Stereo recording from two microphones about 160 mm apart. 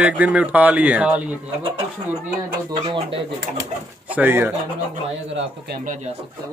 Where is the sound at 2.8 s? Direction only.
30° right (ahead or behind).